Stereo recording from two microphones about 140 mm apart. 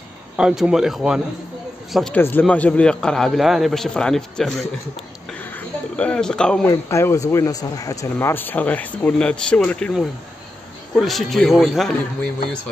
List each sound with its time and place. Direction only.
0.4 s a man's voice: 5° right (ahead or behind)
2.1 s a man's voice: 10° left (ahead or behind)
5.4 s a sound: 10° left (ahead or behind)
6.7 s speech: 20° left (ahead or behind)
11.0 s a man's voice: centre (ahead or behind)